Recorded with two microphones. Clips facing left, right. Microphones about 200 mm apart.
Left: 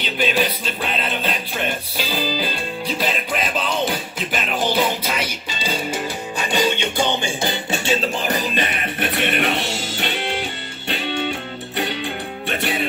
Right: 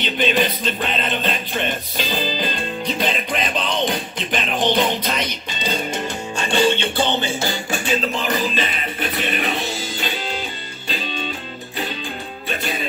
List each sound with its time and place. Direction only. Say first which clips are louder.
0.0 s music: right 1 dB; 5° left (ahead or behind); by 8.4 s 25° left (ahead or behind)
8.8 s music: left 2 dB; 65° left (ahead or behind)